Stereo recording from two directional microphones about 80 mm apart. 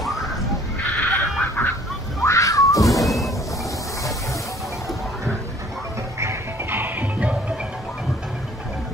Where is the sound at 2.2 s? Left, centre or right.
Left.